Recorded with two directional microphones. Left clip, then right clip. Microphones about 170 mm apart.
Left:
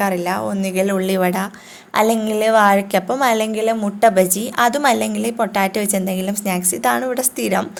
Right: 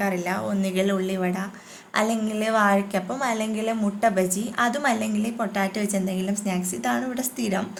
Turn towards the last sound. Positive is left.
turn(degrees=45)  # may be behind; listen again after turning